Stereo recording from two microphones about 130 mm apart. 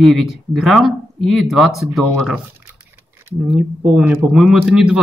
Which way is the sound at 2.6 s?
20° right (ahead or behind).